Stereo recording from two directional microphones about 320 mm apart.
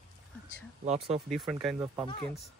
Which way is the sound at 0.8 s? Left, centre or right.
Centre.